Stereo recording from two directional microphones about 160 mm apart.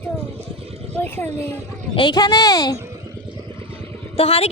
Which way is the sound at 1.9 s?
30° left (ahead or behind).